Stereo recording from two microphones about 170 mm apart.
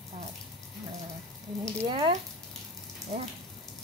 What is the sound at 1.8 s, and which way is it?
Speech, 30° right (ahead or behind).